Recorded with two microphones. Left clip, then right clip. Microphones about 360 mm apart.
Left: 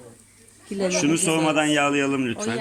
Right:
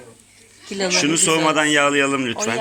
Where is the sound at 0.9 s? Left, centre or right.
Centre.